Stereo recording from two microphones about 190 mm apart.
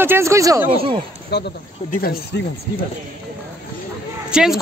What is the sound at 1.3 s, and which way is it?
Speech, 60° left (ahead or behind).